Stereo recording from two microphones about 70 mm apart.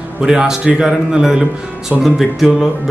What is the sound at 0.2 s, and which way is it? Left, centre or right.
A man's voice, centre.